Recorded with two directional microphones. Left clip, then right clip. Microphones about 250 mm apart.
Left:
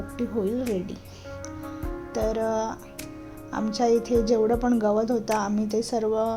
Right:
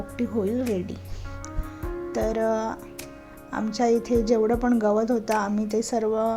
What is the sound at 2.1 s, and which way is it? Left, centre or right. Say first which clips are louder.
Speech: right 1 dB; centre.